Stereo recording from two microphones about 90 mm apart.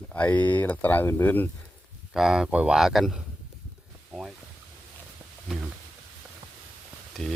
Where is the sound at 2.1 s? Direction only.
5° right (ahead or behind).